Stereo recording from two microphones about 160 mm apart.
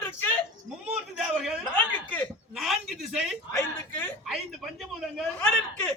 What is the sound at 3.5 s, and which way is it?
Speech, 15° left (ahead or behind).